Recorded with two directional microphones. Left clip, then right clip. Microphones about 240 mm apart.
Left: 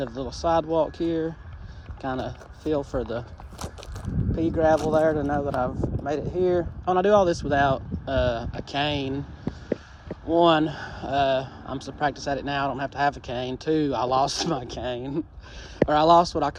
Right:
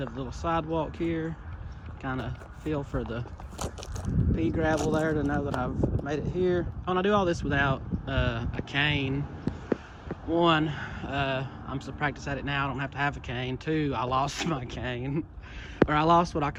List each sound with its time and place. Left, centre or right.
0.0 s speech: centre
10.3 s speech: centre